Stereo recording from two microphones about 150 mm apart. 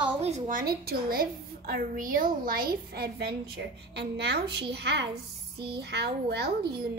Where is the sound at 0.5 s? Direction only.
80° right.